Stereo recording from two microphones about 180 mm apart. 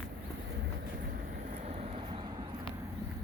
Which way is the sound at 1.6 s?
35° right (ahead or behind).